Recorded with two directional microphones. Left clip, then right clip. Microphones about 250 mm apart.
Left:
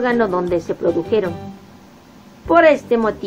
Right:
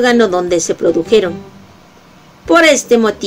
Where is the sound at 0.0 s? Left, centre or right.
Right.